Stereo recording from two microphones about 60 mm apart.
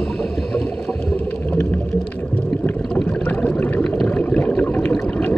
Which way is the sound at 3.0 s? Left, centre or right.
Left.